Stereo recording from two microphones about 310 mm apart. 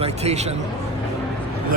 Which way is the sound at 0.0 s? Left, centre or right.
Centre.